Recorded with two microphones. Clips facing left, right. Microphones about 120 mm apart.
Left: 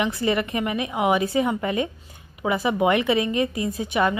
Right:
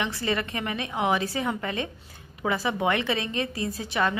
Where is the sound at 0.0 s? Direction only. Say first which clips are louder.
Left 5 dB; 20° left (ahead or behind).